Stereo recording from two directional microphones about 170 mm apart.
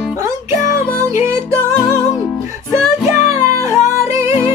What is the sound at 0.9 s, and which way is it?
Music, 15° right (ahead or behind).